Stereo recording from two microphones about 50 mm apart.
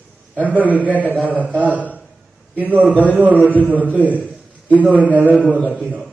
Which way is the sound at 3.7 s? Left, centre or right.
Right.